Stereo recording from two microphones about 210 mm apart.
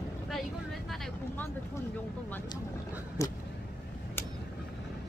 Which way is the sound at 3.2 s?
15° left (ahead or behind).